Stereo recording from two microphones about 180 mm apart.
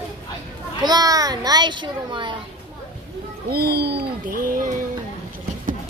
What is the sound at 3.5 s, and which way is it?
Speech, 60° right (ahead or behind).